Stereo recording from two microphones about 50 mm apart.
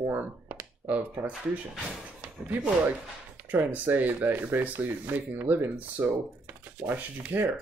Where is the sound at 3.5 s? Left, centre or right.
Right.